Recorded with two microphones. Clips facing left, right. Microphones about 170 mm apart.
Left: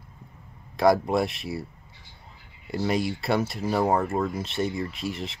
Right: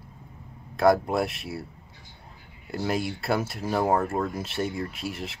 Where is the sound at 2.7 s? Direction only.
5° right (ahead or behind).